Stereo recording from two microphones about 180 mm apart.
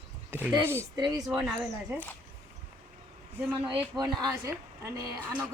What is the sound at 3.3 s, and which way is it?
A woman's voice, 10° right (ahead or behind).